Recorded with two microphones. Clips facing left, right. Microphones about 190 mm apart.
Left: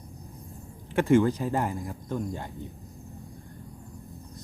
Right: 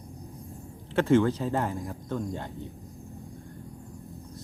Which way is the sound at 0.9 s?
10° left (ahead or behind).